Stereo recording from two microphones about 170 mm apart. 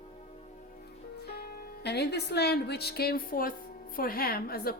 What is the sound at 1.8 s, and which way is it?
A woman's voice, 75° left (ahead or behind).